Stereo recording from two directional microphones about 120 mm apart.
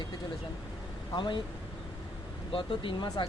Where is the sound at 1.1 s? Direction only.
40° left (ahead or behind).